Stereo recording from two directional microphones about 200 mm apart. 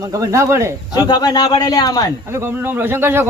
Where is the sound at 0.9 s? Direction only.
20° left (ahead or behind).